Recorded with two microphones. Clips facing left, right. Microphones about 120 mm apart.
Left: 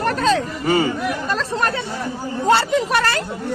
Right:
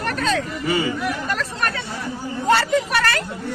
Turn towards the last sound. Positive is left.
turn(degrees=25)  # may be behind; listen again after turning